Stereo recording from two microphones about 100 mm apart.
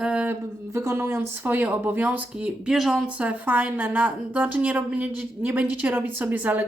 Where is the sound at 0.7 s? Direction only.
30° right (ahead or behind).